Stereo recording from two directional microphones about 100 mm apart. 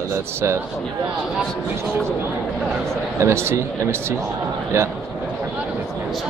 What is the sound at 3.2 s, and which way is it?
Speech, 25° right (ahead or behind).